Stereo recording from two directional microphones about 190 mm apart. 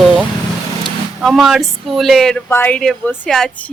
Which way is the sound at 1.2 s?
Centre (ahead or behind).